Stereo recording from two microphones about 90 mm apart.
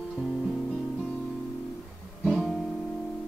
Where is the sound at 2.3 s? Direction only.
5° right (ahead or behind).